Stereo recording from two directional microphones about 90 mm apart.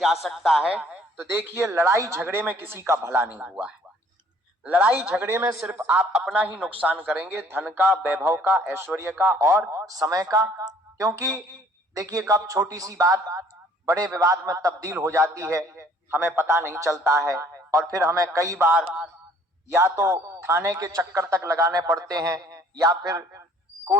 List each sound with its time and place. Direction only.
0.0 s a man's voice: centre (ahead or behind)
1.2 s speech: 25° right (ahead or behind)
3.3 s speech: 10° right (ahead or behind)
6.1 s a man's voice: 5° right (ahead or behind)
6.7 s a man's voice: 15° right (ahead or behind); by 18.7 s 35° right (ahead or behind)
18.7 s speech: 15° right (ahead or behind)
19.7 s a man's voice: 30° right (ahead or behind)